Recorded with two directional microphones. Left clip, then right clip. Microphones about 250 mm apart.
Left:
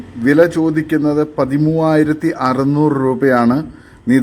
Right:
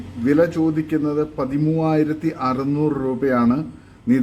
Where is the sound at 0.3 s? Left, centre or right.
Centre.